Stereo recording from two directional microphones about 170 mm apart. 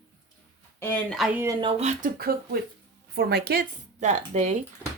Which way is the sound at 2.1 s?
65° right (ahead or behind).